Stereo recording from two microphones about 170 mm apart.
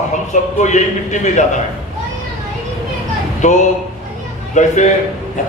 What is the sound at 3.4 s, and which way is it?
A man's voice, 45° left (ahead or behind).